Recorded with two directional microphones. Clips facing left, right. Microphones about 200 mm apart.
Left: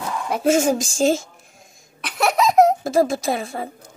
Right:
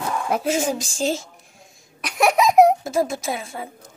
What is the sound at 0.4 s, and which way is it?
Speech, 45° left (ahead or behind).